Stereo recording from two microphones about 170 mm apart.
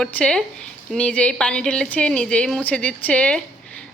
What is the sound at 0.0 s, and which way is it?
A woman's voice, 5° left (ahead or behind).